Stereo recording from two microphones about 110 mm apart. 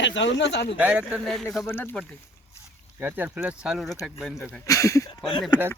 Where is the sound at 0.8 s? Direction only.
15° right (ahead or behind).